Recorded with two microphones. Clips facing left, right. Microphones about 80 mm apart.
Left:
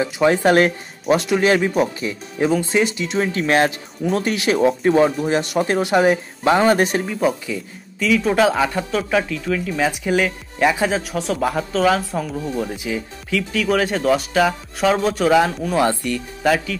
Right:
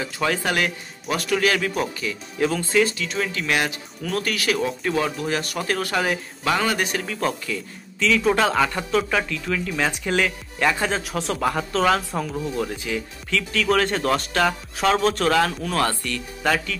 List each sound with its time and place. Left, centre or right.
0.0 s speech: left
2.4 s speech: centre
7.1 s speech: centre
8.2 s speech: centre
11.0 s speech: centre
12.5 s speech: centre